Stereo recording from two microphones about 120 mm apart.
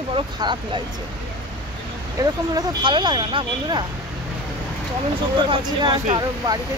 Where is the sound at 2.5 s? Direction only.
40° right (ahead or behind).